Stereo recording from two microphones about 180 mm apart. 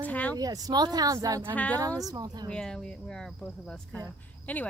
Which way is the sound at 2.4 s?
5° left (ahead or behind).